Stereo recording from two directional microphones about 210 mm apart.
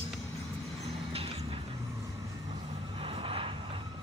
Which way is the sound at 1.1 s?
25° right (ahead or behind).